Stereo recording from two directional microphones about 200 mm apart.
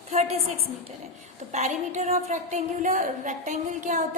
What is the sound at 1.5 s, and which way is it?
A woman's voice, 35° right (ahead or behind).